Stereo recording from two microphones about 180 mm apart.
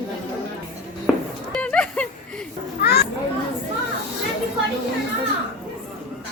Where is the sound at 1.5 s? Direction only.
5° left (ahead or behind).